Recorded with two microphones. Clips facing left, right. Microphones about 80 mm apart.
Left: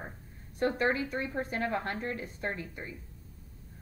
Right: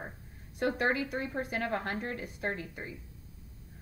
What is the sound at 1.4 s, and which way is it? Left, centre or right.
A woman's voice, right.